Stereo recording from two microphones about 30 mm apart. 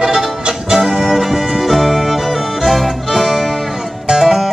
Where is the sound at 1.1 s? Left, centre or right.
Centre.